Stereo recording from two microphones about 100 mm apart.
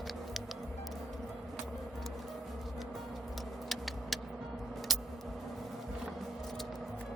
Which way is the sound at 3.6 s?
Centre (ahead or behind).